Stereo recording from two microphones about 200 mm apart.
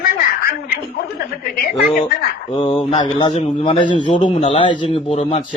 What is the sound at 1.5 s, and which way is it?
Speech, 50° left (ahead or behind).